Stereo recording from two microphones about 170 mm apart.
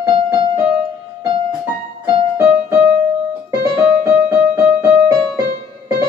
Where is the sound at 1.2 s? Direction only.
30° right (ahead or behind).